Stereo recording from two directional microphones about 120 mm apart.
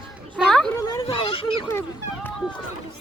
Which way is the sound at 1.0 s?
50° left (ahead or behind).